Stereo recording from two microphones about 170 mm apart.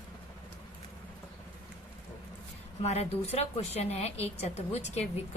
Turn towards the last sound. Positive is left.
turn(degrees=40)  # may be behind; listen again after turning